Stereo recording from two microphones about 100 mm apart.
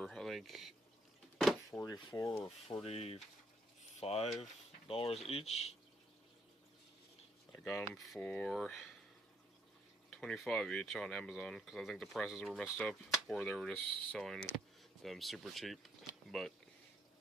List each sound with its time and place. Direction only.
0.0 s a sound: centre (ahead or behind)
1.7 s speech: 15° left (ahead or behind)
2.8 s a sound: 85° left
4.0 s speech: 90° left
4.4 s speech: 75° left (ahead or behind)
7.8 s speech: centre (ahead or behind)
8.2 s speech: 10° left (ahead or behind)
10.0 s speech: 5° left (ahead or behind)